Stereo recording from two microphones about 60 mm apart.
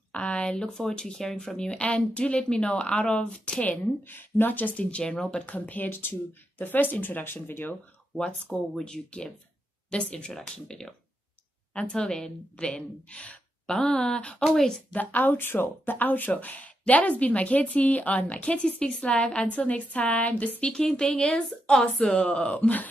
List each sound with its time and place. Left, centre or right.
0.1 s speech: centre
3.7 s speech: left
4.9 s a woman's voice: centre; by 7.7 s left
8.2 s speech: centre
10.3 s speech: centre
14.4 s speech: centre
14.9 s a woman's voice: left